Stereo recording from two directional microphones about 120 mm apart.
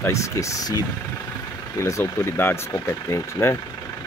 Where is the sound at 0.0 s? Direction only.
25° left (ahead or behind).